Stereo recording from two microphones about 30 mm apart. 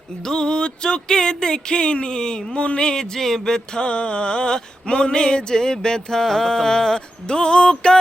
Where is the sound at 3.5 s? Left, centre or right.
Left.